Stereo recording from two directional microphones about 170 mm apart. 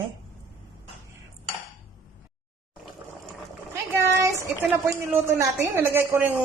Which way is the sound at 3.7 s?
15° right (ahead or behind).